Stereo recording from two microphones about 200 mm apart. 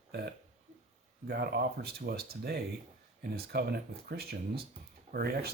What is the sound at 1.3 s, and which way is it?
Speech, 50° right (ahead or behind).